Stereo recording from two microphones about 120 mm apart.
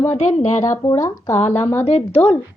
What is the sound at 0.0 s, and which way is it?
Speech, 70° left (ahead or behind).